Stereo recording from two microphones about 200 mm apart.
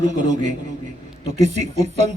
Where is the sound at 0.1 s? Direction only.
35° right (ahead or behind).